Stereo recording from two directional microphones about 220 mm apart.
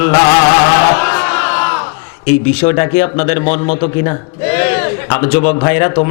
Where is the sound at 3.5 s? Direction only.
35° left (ahead or behind).